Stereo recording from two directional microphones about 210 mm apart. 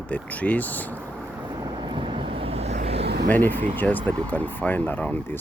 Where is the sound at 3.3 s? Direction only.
10° left (ahead or behind).